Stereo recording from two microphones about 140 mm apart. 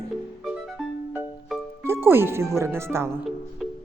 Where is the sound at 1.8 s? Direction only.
15° right (ahead or behind).